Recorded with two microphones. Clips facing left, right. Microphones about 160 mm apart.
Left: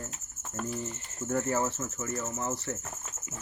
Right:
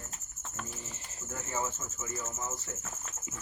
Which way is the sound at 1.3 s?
65° left (ahead or behind).